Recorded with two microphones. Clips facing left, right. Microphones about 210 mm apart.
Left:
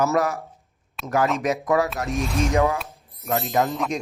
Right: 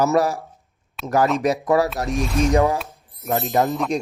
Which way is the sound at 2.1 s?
Centre (ahead or behind).